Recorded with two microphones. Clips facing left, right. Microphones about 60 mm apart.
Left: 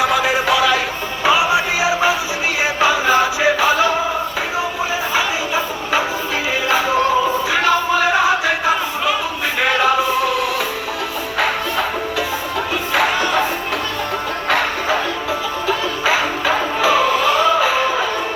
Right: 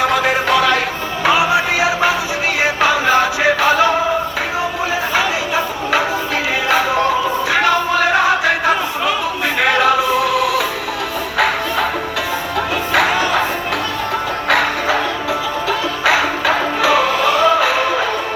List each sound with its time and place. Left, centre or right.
0.0 s a sound: right
1.2 s music: right
5.1 s chatter: right
6.7 s music: right
9.6 s music: right
11.3 s music: right
14.4 s music: right